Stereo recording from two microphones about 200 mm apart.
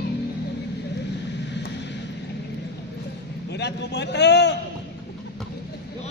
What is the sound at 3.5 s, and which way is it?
Speech, 55° left (ahead or behind).